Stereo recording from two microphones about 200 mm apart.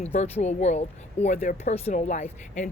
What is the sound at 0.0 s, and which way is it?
Speech, 35° left (ahead or behind).